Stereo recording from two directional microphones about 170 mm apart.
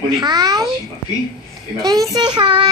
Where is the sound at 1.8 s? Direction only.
20° right (ahead or behind).